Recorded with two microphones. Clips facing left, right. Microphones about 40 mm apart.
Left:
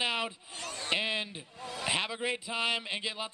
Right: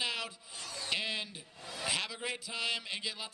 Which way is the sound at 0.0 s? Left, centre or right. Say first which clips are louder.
Left 5 dB; left.